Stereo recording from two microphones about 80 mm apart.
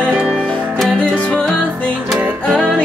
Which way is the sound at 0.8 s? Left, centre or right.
Centre.